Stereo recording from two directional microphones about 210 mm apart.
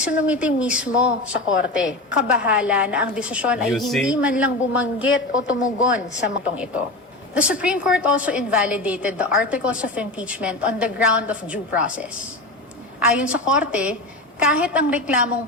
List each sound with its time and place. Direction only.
0.0 s a woman's voice: 5° right (ahead or behind)
1.5 s a woman's voice: 60° left (ahead or behind)
1.9 s a woman's voice: 5° right (ahead or behind)
5.0 s a woman's voice: 70° left (ahead or behind)
7.3 s a woman's voice: 5° right (ahead or behind)